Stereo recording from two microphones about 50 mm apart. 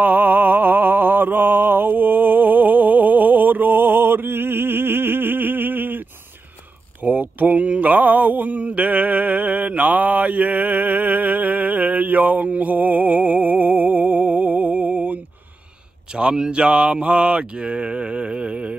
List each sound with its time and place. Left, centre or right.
0.0 s mantra: right
7.0 s mantra: right
16.2 s a sound: centre